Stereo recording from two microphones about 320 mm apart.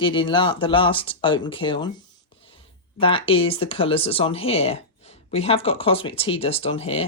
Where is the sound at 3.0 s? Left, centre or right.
Centre.